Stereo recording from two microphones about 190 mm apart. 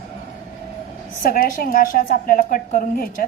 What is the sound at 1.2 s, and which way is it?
A woman's voice, 50° left (ahead or behind).